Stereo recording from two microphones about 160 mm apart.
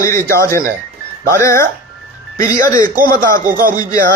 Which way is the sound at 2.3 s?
60° right (ahead or behind).